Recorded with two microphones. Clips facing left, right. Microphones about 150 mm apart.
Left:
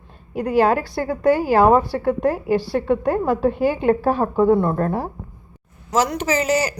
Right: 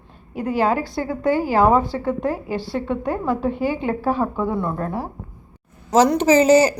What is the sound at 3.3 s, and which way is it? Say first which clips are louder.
Speech: left 3 dB; 20° right (ahead or behind).